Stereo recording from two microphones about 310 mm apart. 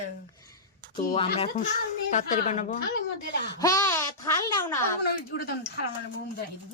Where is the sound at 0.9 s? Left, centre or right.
Centre.